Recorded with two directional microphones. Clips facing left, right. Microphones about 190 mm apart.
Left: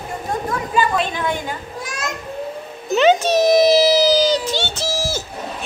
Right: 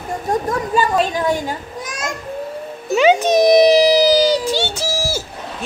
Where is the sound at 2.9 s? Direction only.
10° right (ahead or behind).